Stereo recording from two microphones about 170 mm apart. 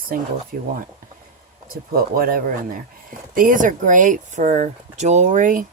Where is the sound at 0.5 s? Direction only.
55° right (ahead or behind).